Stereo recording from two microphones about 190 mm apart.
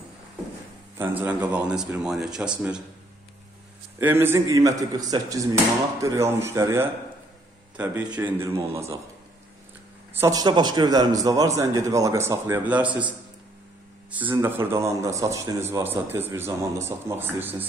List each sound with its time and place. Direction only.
0.9 s speech: 10° right (ahead or behind)
4.0 s a man's voice: 10° right (ahead or behind)
10.1 s a man's voice: 20° right (ahead or behind)
14.3 s a man's voice: 15° right (ahead or behind)